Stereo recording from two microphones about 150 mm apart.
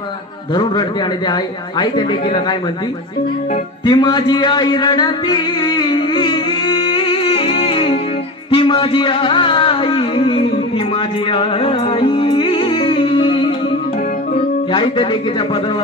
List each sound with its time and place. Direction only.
1.3 s speech: 30° left (ahead or behind)
3.8 s music: 30° left (ahead or behind)
8.5 s a sound: 35° left (ahead or behind)
11.3 s music: 35° left (ahead or behind)
14.7 s music: 35° left (ahead or behind)